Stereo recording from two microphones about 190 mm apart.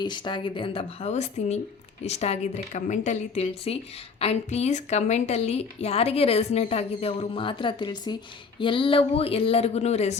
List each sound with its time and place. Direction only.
0.0 s a woman's voice: 25° left (ahead or behind)